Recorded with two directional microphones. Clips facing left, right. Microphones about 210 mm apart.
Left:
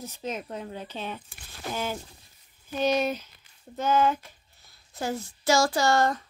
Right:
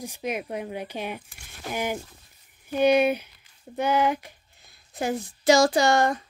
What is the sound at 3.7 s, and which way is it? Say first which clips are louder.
Speech: right 1 dB; 15° right (ahead or behind).